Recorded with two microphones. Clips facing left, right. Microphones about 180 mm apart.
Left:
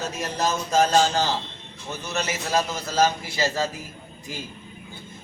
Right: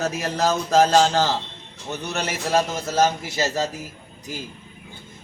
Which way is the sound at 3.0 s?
40° right (ahead or behind).